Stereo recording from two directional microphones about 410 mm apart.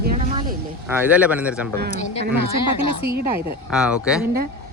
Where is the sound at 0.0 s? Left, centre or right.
Right.